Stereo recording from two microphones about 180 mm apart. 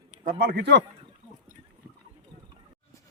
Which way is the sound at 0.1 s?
55° right (ahead or behind).